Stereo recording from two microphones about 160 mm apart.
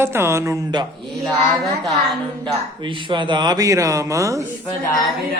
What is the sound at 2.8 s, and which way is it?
Speech, 30° right (ahead or behind).